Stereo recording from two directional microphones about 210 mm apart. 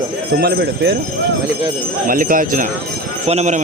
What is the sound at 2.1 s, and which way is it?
A man's voice, 40° right (ahead or behind).